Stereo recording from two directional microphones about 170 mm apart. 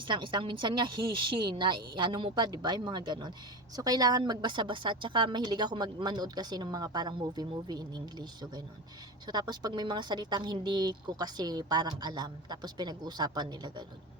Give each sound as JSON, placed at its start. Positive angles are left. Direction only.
{"t": 0.0, "sound": "a woman's voice", "side_deg": -30}